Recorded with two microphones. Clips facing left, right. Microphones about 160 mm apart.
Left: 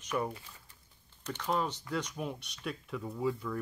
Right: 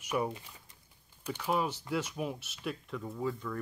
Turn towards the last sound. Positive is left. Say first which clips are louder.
# left 2 dB
turn(degrees=5)  # may be behind; listen again after turning